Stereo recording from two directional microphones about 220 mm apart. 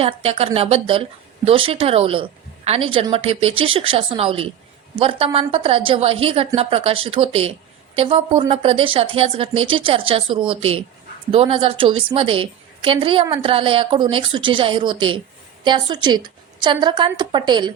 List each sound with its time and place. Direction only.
0.0 s a woman's voice: 25° right (ahead or behind)